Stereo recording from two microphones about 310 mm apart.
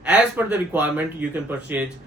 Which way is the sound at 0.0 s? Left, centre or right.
Centre.